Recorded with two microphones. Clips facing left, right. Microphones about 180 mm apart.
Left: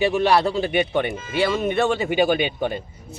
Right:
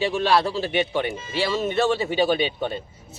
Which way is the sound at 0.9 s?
55° left (ahead or behind).